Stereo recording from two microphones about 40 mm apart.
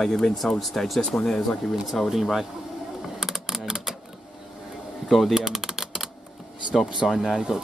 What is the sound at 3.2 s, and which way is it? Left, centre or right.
Mechanisms, centre.